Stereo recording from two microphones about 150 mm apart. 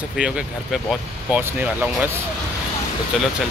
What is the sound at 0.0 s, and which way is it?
Speech, 5° right (ahead or behind).